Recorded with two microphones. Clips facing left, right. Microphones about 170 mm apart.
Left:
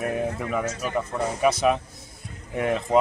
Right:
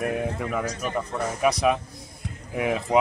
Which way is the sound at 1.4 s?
Centre (ahead or behind).